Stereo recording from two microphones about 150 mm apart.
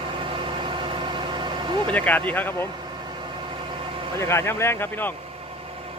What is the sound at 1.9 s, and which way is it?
Speech, 10° left (ahead or behind).